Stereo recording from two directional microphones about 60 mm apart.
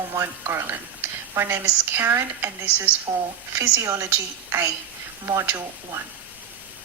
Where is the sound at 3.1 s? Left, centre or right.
Right.